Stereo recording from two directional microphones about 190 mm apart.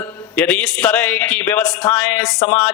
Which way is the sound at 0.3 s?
10° left (ahead or behind).